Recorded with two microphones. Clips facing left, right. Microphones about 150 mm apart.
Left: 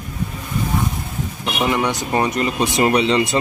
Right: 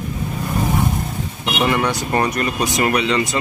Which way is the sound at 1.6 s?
15° left (ahead or behind).